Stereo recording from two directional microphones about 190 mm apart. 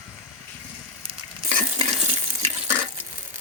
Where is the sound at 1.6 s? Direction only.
30° right (ahead or behind).